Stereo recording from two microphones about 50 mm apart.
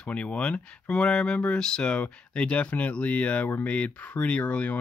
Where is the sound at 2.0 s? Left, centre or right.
Left.